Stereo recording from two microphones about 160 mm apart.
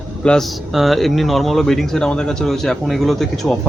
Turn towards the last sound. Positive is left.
turn(degrees=0)  # may be behind; listen again after turning